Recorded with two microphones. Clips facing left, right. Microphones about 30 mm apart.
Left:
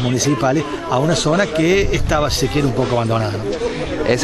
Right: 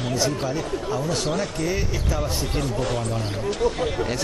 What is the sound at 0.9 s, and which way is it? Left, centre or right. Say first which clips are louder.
Speech: left 11 dB; left.